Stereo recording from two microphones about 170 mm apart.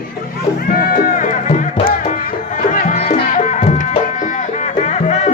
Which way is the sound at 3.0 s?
40° left (ahead or behind).